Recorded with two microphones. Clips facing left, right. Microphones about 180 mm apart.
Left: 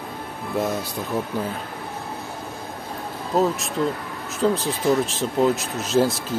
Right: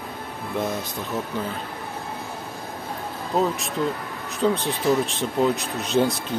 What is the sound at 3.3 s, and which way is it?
Speech, centre (ahead or behind).